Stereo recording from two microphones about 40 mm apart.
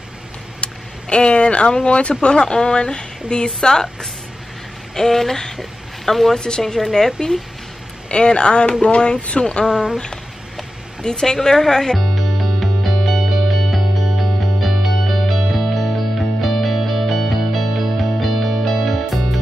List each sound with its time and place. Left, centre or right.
0.6 s vehicle: left
1.9 s speech: left
2.3 s a woman's voice: centre
8.1 s speech: left
9.7 s speech: centre
11.1 s music: centre